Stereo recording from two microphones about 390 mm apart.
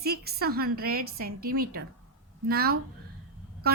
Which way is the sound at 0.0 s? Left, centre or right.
Right.